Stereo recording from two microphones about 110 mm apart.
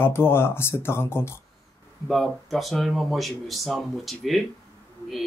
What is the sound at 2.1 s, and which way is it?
Speech, centre (ahead or behind).